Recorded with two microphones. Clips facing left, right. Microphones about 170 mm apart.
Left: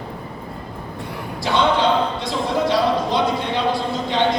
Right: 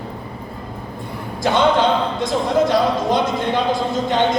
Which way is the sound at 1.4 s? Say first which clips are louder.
Right 2 dB; 50° right (ahead or behind).